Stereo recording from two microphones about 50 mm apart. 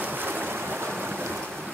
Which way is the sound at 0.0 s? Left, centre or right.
Right.